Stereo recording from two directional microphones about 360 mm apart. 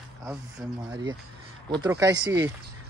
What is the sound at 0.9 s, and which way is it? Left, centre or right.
Speech, centre.